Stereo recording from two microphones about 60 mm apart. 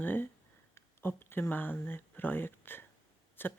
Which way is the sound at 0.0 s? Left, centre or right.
Left.